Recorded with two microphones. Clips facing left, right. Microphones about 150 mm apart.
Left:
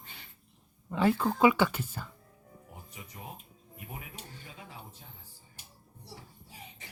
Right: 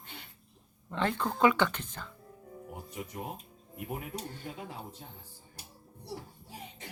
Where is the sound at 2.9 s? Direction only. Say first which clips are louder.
Right 7 dB; 55° right (ahead or behind).